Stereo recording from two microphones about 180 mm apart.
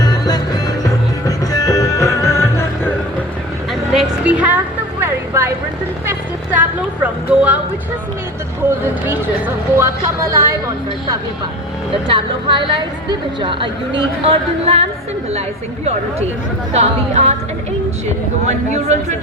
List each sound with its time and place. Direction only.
0.0 s music: 20° left (ahead or behind)
1.5 s music: 20° left (ahead or behind)
3.9 s a sound: 5° right (ahead or behind)
9.7 s speech: 15° right (ahead or behind)
12.0 s a woman's voice: 30° right (ahead or behind)
16.7 s a woman's voice: 35° right (ahead or behind)
18.4 s a woman's voice: 40° right (ahead or behind)